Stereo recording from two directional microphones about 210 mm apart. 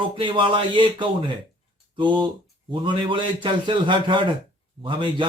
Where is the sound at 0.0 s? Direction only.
20° right (ahead or behind).